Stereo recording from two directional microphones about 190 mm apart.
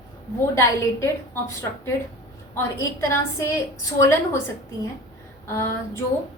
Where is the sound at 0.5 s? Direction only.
15° left (ahead or behind).